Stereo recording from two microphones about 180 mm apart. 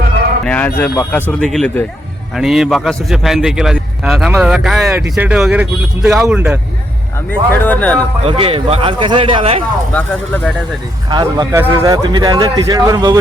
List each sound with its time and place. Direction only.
0.4 s a man's voice: 10° left (ahead or behind)
7.3 s speech: 10° left (ahead or behind)
8.2 s speech: 30° right (ahead or behind)
9.9 s speech: 10° left (ahead or behind)
11.1 s speech: 25° right (ahead or behind)